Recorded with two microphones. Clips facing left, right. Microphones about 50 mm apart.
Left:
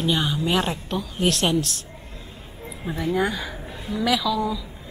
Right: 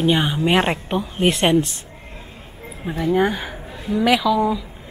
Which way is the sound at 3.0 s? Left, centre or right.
Right.